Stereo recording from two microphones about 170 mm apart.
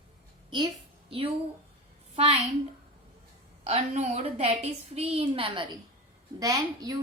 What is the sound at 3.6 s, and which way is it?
A woman's voice, 40° right (ahead or behind).